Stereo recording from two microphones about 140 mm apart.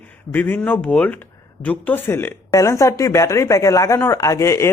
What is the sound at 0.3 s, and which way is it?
Speech, 15° left (ahead or behind).